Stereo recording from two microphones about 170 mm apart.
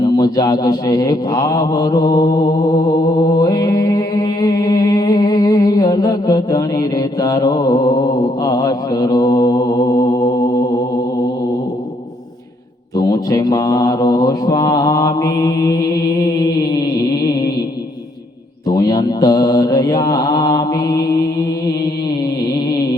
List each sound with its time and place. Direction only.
0.0 s speech: 25° left (ahead or behind)
2.8 s mantra: 25° left (ahead or behind)
13.0 s mantra: 25° left (ahead or behind)
18.7 s speech: 25° left (ahead or behind)